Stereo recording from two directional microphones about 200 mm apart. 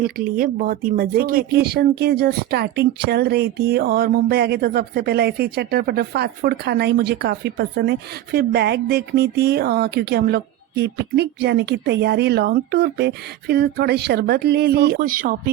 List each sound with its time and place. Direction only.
0.0 s speech: 45° right (ahead or behind)